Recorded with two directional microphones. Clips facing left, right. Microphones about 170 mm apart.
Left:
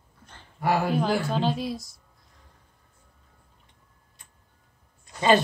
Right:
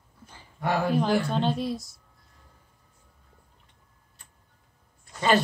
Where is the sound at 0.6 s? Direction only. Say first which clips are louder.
Left 1 dB; 5° left (ahead or behind).